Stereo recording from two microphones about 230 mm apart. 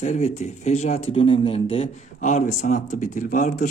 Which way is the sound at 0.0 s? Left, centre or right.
Left.